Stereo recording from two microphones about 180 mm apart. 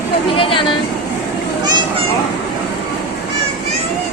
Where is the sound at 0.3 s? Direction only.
30° left (ahead or behind).